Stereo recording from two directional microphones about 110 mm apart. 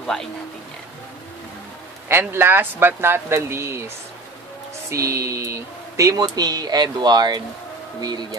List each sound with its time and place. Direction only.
0.0 s speech: 5° left (ahead or behind)
2.0 s speech: 20° right (ahead or behind)
4.8 s speech: 25° right (ahead or behind)